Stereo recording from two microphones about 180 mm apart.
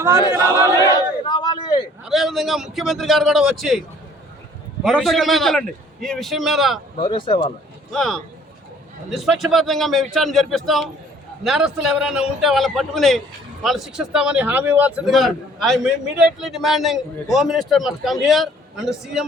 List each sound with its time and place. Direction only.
0.3 s speech: 15° right (ahead or behind)
0.8 s a sound: 25° left (ahead or behind)
2.0 s a man's voice: centre (ahead or behind)
4.9 s a man's voice: centre (ahead or behind)
7.0 s speech: 25° left (ahead or behind)
7.9 s a man's voice: 5° left (ahead or behind)